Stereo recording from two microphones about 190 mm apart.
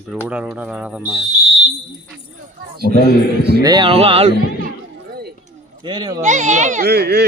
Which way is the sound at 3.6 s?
25° right (ahead or behind).